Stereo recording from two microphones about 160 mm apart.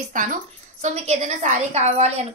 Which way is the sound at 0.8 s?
40° right (ahead or behind).